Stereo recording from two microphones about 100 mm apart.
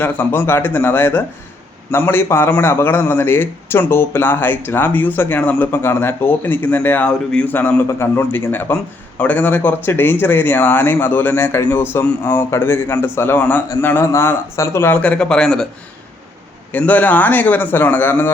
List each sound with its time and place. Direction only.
0.0 s a man's voice: 20° left (ahead or behind)
7.9 s a man's voice: 25° left (ahead or behind); by 15.6 s 5° left (ahead or behind)
16.7 s a man's voice: 15° left (ahead or behind)